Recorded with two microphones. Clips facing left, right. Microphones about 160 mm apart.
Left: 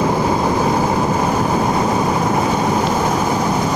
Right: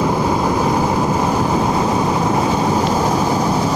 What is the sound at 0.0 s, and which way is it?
Vehicle, centre (ahead or behind).